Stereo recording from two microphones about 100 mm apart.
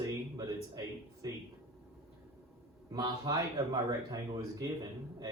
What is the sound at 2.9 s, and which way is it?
Speech, 40° right (ahead or behind).